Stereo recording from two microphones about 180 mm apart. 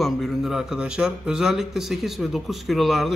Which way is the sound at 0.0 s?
Centre (ahead or behind).